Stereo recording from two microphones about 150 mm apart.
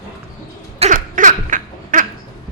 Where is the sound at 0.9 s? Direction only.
60° right (ahead or behind).